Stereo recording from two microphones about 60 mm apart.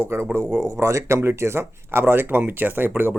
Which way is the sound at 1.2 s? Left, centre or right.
Right.